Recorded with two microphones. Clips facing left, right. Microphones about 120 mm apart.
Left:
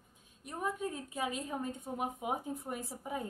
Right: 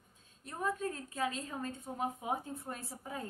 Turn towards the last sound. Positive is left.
turn(degrees=15)  # may be behind; listen again after turning